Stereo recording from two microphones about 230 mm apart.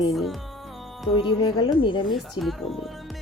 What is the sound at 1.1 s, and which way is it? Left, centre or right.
Speech, centre.